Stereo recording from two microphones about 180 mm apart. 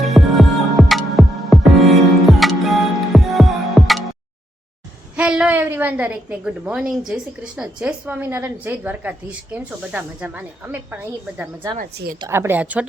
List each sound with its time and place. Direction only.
0.0 s music: centre (ahead or behind)
5.1 s a woman's voice: 5° right (ahead or behind)
11.8 s a woman's voice: 55° right (ahead or behind)
12.3 s a woman's voice: 10° right (ahead or behind)